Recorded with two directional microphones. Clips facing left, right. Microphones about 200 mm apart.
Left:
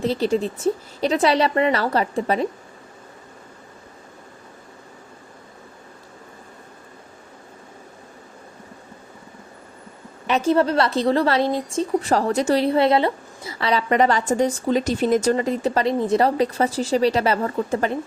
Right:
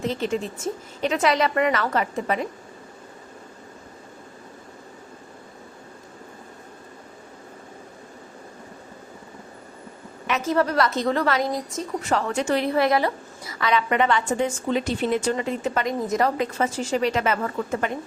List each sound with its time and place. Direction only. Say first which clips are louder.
0.0 s a woman's voice: left 5 dB; 35° left (ahead or behind)
10.2 s a woman's voice: left 4 dB; 30° left (ahead or behind)